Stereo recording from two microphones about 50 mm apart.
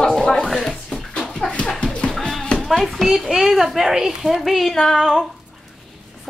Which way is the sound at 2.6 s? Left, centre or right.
Centre.